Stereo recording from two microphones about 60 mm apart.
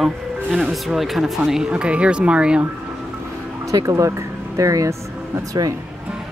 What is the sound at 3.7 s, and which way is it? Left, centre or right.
Speech, right.